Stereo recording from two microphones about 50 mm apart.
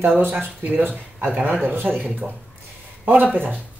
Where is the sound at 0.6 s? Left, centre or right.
Right.